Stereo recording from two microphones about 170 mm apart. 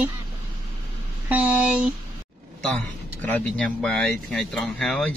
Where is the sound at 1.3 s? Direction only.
10° right (ahead or behind).